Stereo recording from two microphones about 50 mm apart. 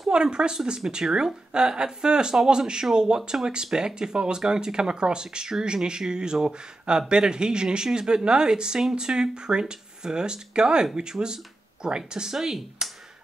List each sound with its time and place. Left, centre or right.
0.1 s speech: centre